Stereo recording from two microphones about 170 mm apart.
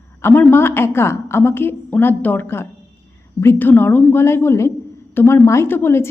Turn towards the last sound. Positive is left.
turn(degrees=15)  # may be behind; listen again after turning